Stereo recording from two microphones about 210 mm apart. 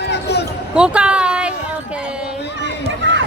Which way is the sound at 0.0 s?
55° left (ahead or behind).